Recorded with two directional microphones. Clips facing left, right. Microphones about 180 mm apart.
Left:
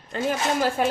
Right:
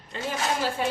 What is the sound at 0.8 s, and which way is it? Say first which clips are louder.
Speech: left 5 dB; 55° left (ahead or behind).